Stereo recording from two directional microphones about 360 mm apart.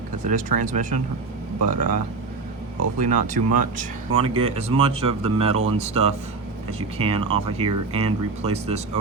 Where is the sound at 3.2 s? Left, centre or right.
Right.